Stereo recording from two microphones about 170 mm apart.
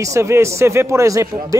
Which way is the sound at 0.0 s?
15° right (ahead or behind).